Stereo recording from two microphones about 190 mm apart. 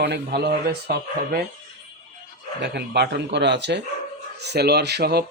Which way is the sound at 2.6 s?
60° right (ahead or behind).